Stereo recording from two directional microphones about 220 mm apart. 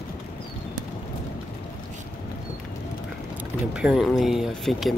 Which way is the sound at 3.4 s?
5° right (ahead or behind).